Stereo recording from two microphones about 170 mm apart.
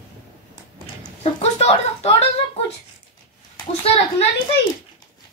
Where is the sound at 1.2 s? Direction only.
40° left (ahead or behind).